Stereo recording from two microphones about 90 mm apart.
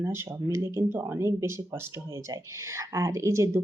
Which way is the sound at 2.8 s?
35° right (ahead or behind).